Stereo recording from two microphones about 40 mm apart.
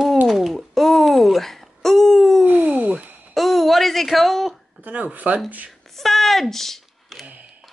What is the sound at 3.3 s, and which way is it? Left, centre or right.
Babbling, centre.